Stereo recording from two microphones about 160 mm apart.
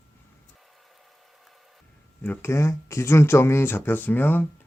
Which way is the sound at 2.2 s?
15° left (ahead or behind).